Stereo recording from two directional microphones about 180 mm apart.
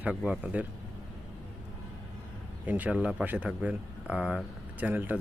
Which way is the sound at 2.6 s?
10° right (ahead or behind).